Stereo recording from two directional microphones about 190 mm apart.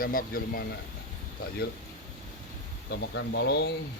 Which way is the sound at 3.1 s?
65° left (ahead or behind).